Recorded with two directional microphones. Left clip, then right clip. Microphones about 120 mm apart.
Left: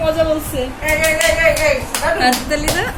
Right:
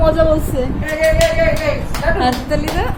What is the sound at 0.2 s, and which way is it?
Speech, 35° right (ahead or behind).